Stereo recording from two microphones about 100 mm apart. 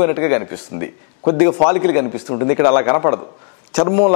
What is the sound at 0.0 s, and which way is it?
A man's voice, 15° left (ahead or behind).